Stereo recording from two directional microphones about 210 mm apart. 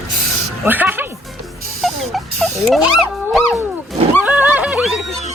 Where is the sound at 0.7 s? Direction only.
10° right (ahead or behind).